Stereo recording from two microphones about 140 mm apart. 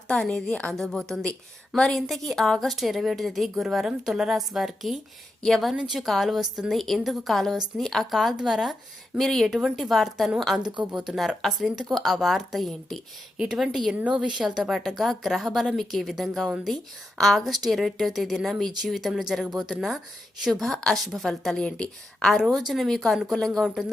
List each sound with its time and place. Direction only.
0.1 s a woman's voice: 5° left (ahead or behind)